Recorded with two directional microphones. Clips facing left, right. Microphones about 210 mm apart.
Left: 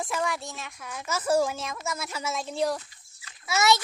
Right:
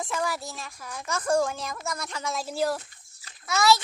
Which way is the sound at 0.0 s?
10° left (ahead or behind).